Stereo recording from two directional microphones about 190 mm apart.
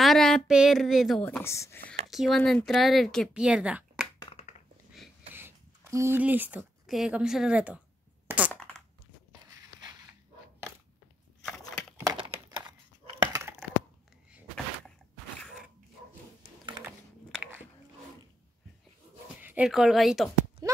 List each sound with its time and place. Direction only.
0.0 s speech: centre (ahead or behind)
1.2 s speech: 10° left (ahead or behind)
2.0 s speech: centre (ahead or behind)
4.2 s crushing: 30° left (ahead or behind)
5.3 s speech: 15° right (ahead or behind)
8.3 s coin: 5° right (ahead or behind)
9.5 s biting: 20° right (ahead or behind)
12.0 s a sound: 20° right (ahead or behind)
13.2 s dog: 15° right (ahead or behind)
17.4 s biting: 10° right (ahead or behind)
19.4 s speech: 5° right (ahead or behind)
20.6 s clip-clop: 20° right (ahead or behind)